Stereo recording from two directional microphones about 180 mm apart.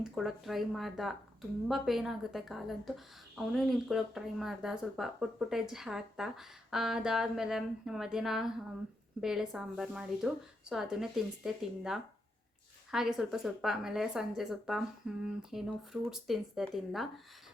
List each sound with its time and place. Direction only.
0.0 s speech: centre (ahead or behind)